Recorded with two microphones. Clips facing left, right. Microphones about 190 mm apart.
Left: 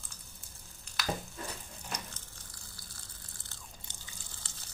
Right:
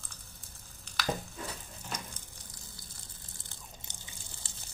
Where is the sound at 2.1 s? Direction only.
20° right (ahead or behind).